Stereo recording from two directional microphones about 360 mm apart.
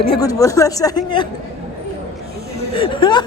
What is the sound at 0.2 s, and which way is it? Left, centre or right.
Speech, centre.